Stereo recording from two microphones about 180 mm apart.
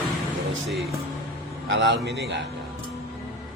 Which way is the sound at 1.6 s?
80° right.